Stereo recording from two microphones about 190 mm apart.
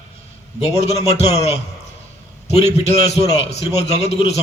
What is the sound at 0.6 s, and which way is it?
Speech, 35° left (ahead or behind).